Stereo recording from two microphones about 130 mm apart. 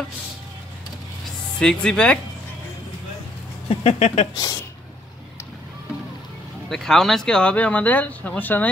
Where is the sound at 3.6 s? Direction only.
50° left (ahead or behind).